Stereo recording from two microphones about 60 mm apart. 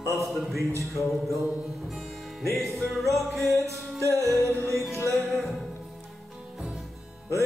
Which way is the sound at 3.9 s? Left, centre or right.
Right.